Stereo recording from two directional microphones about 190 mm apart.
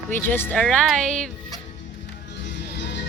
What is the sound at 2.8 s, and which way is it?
Music, 65° left (ahead or behind).